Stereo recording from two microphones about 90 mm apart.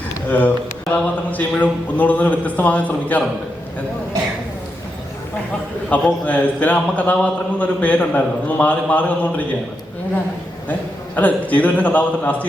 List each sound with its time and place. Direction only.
0.3 s a man's voice: 20° left (ahead or behind)
5.9 s a man's voice: 15° left (ahead or behind)
10.7 s a man's voice: 15° left (ahead or behind)